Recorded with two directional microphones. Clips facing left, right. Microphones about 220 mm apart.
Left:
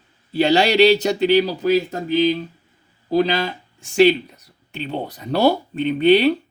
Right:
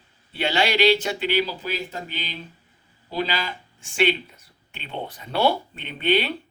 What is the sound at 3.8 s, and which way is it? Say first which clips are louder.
Speech: left 9 dB; 40° left (ahead or behind).